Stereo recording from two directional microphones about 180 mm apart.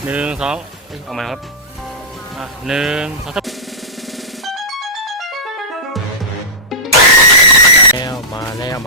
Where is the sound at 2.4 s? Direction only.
5° right (ahead or behind).